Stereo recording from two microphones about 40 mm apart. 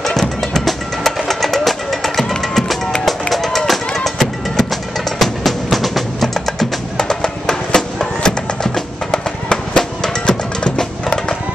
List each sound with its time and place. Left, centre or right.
0.0 s music: centre
6.2 s music: centre